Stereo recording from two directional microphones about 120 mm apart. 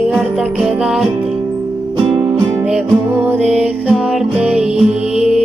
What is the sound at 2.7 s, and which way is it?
Music, 20° right (ahead or behind).